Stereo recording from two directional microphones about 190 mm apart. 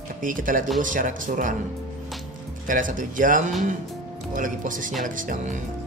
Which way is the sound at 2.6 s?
45° right (ahead or behind).